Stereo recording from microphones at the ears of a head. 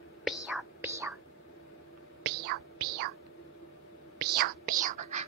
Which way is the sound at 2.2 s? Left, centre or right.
Right.